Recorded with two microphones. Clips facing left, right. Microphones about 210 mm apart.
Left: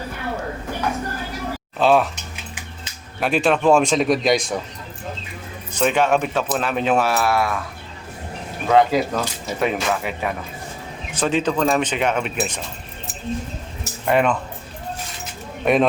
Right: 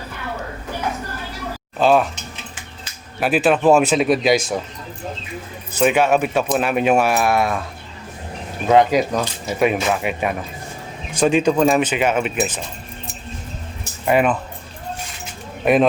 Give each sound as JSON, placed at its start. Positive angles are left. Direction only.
{"t": 1.8, "sound": "speech", "side_deg": 0}
{"t": 3.2, "sound": "speech", "side_deg": -5}
{"t": 5.7, "sound": "speech", "side_deg": -10}
{"t": 8.7, "sound": "speech", "side_deg": -20}
{"t": 14.0, "sound": "speech", "side_deg": -5}
{"t": 15.6, "sound": "speech", "side_deg": -5}